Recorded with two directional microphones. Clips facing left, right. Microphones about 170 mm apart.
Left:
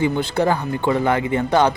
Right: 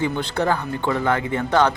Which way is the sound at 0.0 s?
10° left (ahead or behind).